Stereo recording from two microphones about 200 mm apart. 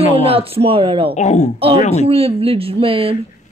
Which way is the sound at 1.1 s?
35° left (ahead or behind).